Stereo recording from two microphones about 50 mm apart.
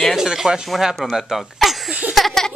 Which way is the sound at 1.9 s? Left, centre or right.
Right.